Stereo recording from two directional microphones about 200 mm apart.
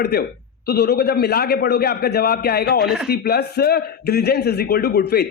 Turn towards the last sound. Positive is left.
turn(degrees=55)  # may be behind; listen again after turning